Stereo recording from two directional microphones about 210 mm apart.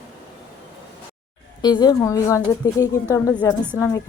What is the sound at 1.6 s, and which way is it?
A woman's voice, 20° left (ahead or behind).